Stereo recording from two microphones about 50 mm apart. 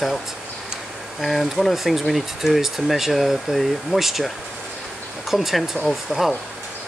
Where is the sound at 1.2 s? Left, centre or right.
Centre.